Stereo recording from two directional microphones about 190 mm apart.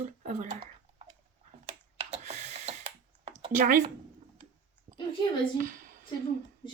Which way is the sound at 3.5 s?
45° right (ahead or behind).